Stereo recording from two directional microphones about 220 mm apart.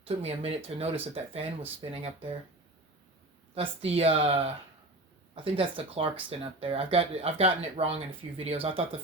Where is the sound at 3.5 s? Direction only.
25° right (ahead or behind).